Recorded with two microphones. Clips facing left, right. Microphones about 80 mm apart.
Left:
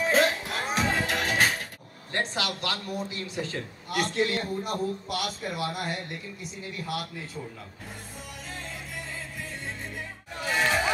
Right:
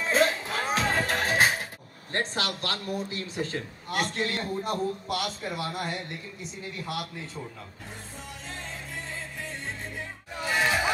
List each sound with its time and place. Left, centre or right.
0.5 s music: right
2.1 s a man's voice: right
10.4 s crowd: centre